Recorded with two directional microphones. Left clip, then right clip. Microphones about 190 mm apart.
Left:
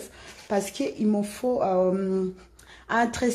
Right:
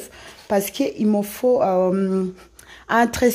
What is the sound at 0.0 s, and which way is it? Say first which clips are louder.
Speech: right 4 dB; 50° right (ahead or behind).